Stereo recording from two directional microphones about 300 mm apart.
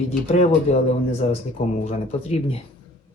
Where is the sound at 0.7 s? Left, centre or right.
Left.